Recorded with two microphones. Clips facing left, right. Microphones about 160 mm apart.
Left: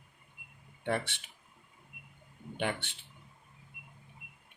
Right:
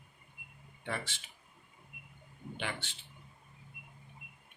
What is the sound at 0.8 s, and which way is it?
Speech, 60° left (ahead or behind).